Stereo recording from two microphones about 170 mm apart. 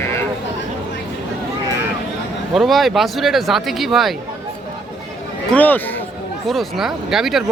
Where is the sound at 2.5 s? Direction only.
Centre (ahead or behind).